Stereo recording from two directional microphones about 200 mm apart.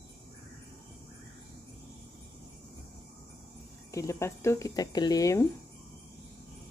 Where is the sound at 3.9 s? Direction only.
15° left (ahead or behind).